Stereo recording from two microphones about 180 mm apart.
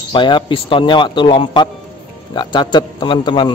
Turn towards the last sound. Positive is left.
turn(degrees=25)  # may be behind; listen again after turning